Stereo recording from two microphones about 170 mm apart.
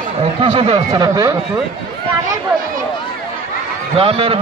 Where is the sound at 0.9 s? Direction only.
20° right (ahead or behind).